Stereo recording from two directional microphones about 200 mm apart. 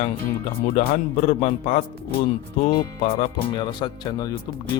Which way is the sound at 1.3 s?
35° left (ahead or behind).